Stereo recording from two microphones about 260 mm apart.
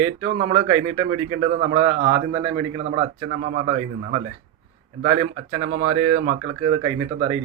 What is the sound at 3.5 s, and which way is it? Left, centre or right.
Speech, right.